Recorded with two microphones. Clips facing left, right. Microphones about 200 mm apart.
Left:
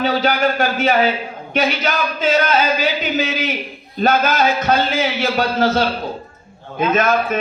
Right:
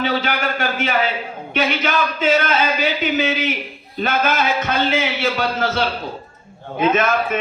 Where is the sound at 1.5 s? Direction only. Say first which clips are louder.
Left 1 dB; 35° left (ahead or behind).